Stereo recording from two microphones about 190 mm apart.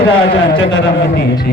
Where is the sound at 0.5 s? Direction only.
75° left (ahead or behind).